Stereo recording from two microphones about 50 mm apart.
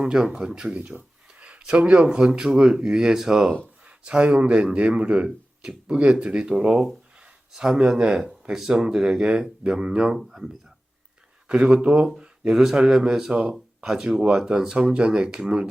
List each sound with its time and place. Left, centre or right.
0.0 s speech: centre
0.8 s speech: right
1.3 s a sound: right
2.0 s speech: centre
11.4 s speech: right
13.3 s speech: right
13.8 s speech: centre